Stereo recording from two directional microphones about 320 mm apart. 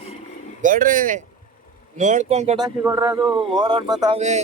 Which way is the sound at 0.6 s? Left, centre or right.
Right.